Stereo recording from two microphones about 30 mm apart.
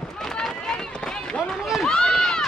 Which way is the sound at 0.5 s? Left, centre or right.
Left.